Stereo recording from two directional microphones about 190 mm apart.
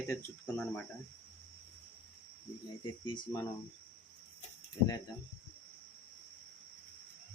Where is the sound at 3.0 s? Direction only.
25° left (ahead or behind).